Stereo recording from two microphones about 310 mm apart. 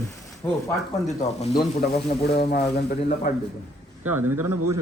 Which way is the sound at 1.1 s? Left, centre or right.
Centre.